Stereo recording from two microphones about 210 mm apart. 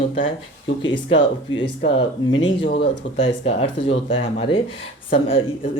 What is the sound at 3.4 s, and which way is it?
Speech, 25° left (ahead or behind).